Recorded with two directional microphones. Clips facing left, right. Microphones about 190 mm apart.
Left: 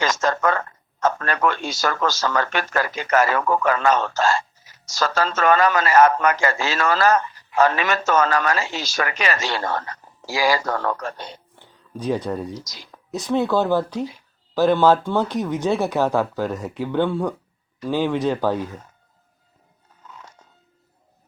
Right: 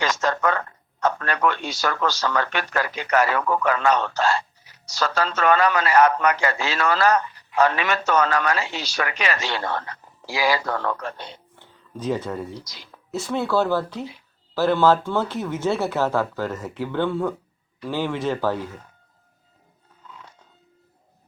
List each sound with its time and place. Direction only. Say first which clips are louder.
0.0 s speech: left 2 dB; 45° left (ahead or behind)
11.6 s speech: left 1 dB; 15° left (ahead or behind)
12.5 s speech: left 2 dB; 45° left (ahead or behind)
13.1 s speech: left 3 dB; 15° left (ahead or behind)
20.1 s biting: left 1 dB; 45° left (ahead or behind)